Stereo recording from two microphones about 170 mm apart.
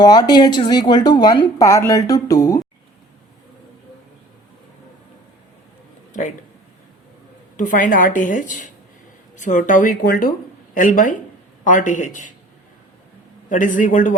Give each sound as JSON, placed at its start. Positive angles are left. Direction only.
{"t": 0.0, "sound": "speech", "side_deg": 25}
{"t": 7.5, "sound": "a woman's voice", "side_deg": 50}
{"t": 13.5, "sound": "a woman's voice", "side_deg": 50}